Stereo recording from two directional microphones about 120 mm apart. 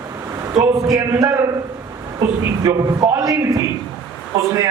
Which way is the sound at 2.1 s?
35° right (ahead or behind).